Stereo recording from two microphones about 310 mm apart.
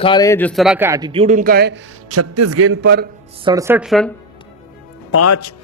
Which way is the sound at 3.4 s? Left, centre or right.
Centre.